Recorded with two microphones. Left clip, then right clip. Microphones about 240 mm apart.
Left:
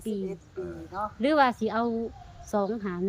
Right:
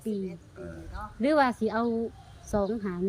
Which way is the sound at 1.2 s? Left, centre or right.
Centre.